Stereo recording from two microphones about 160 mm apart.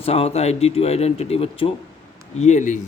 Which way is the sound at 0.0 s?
40° left (ahead or behind).